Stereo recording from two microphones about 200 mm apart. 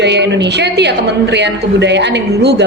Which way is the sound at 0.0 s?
60° right (ahead or behind).